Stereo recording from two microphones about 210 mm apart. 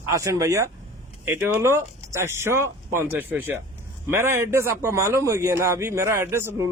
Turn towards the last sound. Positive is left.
turn(degrees=-15)  # may be behind; listen again after turning